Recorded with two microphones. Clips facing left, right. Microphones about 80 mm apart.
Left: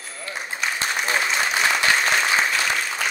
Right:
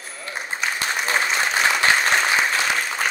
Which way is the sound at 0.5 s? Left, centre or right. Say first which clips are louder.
Right 1 dB; right.